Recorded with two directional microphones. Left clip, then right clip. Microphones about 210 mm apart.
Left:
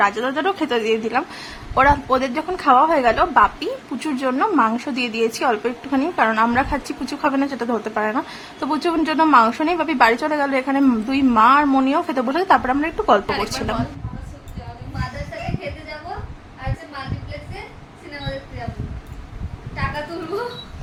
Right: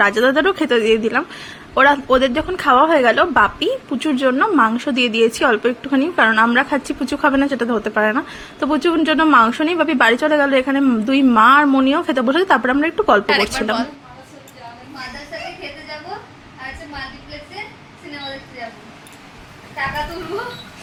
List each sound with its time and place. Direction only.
0.0 s a woman's voice: 20° right (ahead or behind); by 13.7 s 5° right (ahead or behind)